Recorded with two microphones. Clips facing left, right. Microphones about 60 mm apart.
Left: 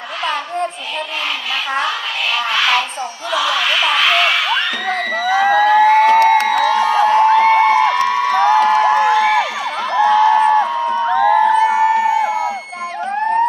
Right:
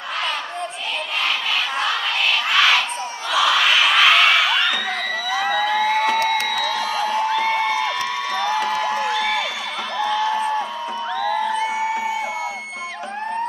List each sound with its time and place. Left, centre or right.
2.5 s a sound: centre
4.9 s music: left
9.9 s music: left